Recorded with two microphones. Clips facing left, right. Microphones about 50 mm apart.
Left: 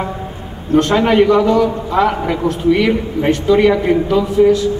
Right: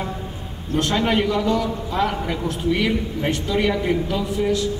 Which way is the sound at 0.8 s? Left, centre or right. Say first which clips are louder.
Left 7 dB; left.